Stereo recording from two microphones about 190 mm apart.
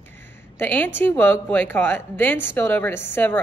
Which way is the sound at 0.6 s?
10° left (ahead or behind).